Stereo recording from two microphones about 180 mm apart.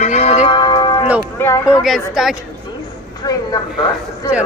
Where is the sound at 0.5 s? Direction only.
20° left (ahead or behind).